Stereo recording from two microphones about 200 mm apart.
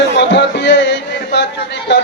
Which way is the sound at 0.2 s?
60° left (ahead or behind).